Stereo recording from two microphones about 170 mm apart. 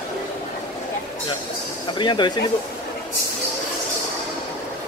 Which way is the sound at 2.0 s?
25° left (ahead or behind).